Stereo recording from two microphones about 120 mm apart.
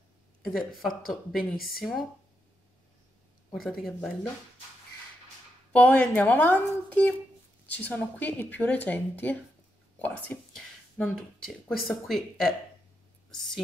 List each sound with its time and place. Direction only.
0.5 s speech: centre (ahead or behind)
3.5 s speech: centre (ahead or behind)
5.7 s speech: 10° left (ahead or behind)
11.7 s speech: centre (ahead or behind)